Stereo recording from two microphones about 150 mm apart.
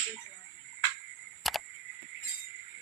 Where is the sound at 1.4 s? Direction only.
Centre (ahead or behind).